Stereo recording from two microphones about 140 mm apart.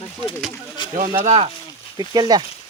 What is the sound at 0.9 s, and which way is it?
Speech, 65° right (ahead or behind).